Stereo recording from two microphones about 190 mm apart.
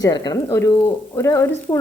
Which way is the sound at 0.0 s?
20° left (ahead or behind).